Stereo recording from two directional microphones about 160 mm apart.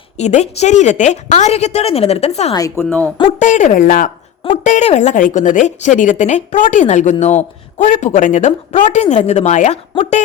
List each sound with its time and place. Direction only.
0.2 s speech: 45° left (ahead or behind)
2.5 s speech: 20° left (ahead or behind)
3.3 s speech: 50° left (ahead or behind)
4.4 s speech: 45° left (ahead or behind)